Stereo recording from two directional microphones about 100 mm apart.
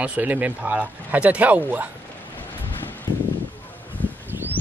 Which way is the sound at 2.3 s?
20° left (ahead or behind).